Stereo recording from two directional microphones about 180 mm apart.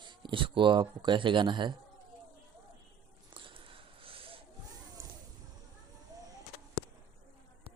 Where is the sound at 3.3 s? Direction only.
30° right (ahead or behind).